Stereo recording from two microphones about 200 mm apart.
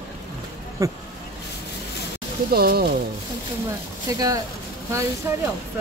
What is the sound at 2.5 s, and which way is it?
Speech, 50° right (ahead or behind).